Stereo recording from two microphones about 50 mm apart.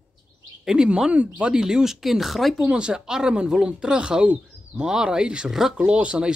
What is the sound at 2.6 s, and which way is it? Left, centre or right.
Speech, centre.